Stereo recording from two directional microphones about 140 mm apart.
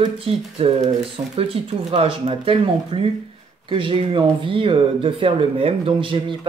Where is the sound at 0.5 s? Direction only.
45° right (ahead or behind).